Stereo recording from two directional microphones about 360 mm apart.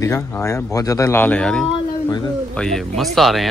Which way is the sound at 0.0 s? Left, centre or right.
Centre.